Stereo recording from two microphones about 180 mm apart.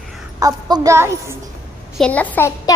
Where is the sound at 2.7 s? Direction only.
20° left (ahead or behind).